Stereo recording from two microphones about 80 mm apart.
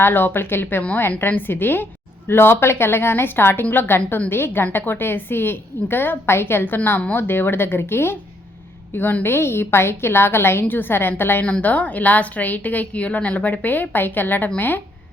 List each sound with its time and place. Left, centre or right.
0.0 s a woman's voice: left
11.4 s a woman's voice: centre